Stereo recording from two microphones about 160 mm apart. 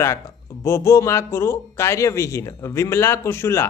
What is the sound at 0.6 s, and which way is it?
Speech, 15° left (ahead or behind).